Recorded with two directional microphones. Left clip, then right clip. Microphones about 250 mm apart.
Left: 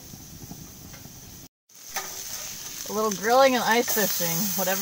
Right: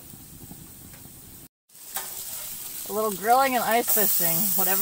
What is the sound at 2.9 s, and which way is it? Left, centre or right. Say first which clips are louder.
Speech: right 1 dB; right.